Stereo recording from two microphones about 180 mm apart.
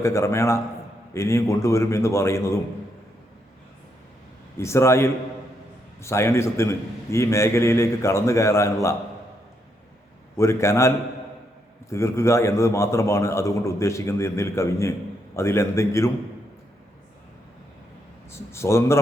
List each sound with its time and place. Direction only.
0.0 s a man's voice: 15° left (ahead or behind)
4.5 s a man's voice: 15° left (ahead or behind)
10.3 s a man's voice: 15° left (ahead or behind)
18.3 s a man's voice: 15° left (ahead or behind)